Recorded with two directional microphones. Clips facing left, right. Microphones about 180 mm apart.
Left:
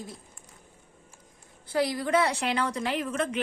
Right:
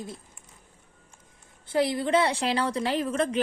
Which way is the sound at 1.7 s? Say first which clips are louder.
Right 2 dB; 25° right (ahead or behind).